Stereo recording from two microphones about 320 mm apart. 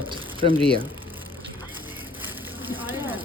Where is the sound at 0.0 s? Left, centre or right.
Centre.